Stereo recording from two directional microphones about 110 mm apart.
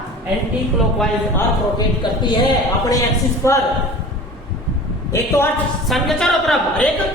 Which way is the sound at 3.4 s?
25° left (ahead or behind).